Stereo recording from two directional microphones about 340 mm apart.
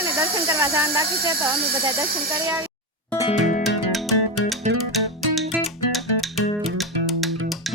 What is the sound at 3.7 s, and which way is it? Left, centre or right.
Music, centre.